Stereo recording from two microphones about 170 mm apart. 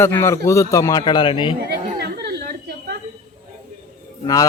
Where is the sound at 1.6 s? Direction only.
70° right (ahead or behind).